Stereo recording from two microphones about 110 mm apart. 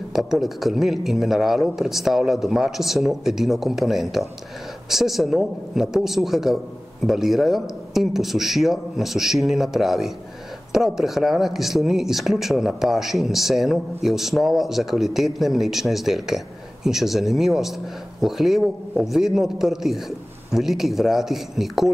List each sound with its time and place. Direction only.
0.1 s speech: 5° right (ahead or behind)